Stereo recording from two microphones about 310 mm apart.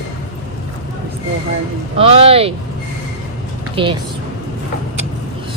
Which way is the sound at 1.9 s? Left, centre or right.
Centre.